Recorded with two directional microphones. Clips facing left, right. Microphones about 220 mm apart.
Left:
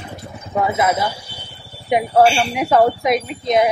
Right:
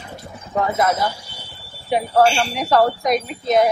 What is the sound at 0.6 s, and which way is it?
Speech, 10° left (ahead or behind).